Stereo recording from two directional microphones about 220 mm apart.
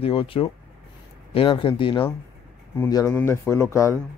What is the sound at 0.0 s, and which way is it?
A man's voice, 25° left (ahead or behind).